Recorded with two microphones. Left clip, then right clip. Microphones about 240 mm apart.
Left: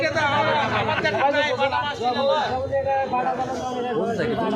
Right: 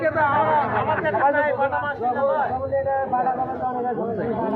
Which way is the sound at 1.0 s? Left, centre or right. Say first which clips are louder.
Right 1 dB; left.